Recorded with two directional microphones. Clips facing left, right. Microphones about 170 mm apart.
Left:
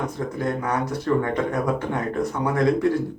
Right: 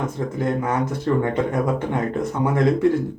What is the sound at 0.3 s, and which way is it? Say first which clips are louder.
Speech: right 3 dB; 25° right (ahead or behind).